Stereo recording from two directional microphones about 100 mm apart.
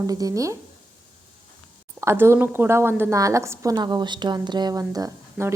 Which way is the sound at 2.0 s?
25° right (ahead or behind).